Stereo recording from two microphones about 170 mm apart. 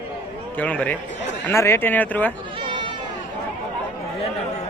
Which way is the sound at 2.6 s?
30° right (ahead or behind).